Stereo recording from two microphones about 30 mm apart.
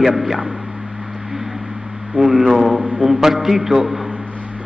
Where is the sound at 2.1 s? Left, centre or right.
Centre.